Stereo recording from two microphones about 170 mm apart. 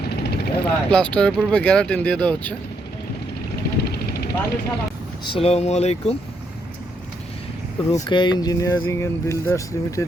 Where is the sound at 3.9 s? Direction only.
70° left (ahead or behind).